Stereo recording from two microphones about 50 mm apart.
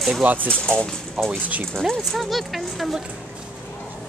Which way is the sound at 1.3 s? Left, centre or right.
Right.